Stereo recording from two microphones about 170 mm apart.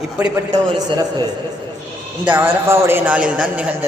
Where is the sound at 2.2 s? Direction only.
10° right (ahead or behind).